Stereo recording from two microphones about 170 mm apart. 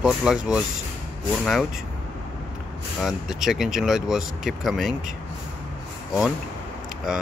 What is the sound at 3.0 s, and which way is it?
Speech, centre (ahead or behind).